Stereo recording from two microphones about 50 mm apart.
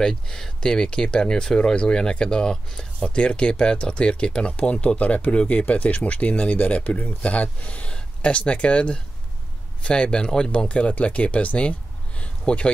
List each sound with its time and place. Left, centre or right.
0.0 s speech: centre